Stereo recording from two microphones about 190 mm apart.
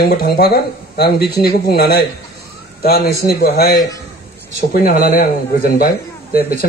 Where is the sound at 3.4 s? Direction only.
55° left (ahead or behind).